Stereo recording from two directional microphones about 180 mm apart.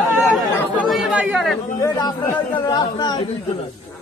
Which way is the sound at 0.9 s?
Centre (ahead or behind).